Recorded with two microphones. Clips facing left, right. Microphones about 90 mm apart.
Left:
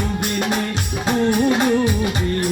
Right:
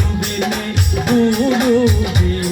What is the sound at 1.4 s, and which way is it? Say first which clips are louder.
Music: right 2 dB; 20° left (ahead or behind).